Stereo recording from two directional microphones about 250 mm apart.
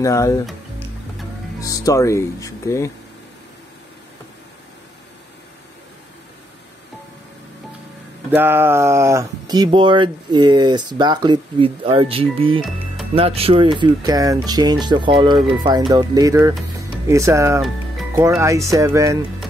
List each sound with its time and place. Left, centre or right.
0.0 s speech: centre
0.5 s music: centre
1.6 s speech: centre
8.3 s speech: centre
17.6 s music: centre
18.2 s speech: centre